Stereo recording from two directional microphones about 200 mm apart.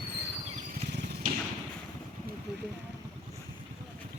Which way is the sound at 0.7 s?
55° right (ahead or behind).